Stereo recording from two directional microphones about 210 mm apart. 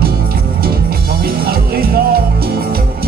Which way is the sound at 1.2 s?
45° right (ahead or behind).